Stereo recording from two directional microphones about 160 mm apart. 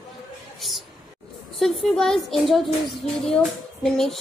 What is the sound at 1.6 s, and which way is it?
A woman's voice, centre (ahead or behind).